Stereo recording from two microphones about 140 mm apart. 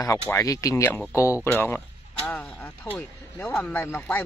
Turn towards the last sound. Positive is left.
turn(degrees=15)  # may be behind; listen again after turning